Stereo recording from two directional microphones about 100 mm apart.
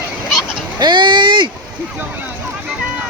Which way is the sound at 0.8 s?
50° right (ahead or behind).